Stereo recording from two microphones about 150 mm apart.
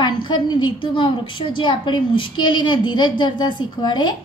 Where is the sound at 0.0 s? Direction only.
30° left (ahead or behind).